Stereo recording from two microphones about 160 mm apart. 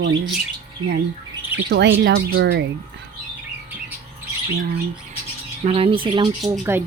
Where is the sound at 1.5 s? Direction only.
10° right (ahead or behind).